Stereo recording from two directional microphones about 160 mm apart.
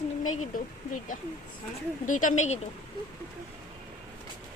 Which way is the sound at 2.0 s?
55° left (ahead or behind).